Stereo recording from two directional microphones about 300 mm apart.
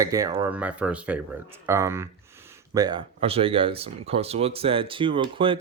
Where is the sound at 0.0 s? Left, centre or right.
Centre.